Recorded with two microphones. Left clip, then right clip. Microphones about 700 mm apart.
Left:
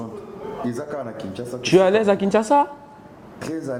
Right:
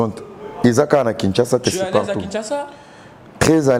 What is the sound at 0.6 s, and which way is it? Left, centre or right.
Speech, right.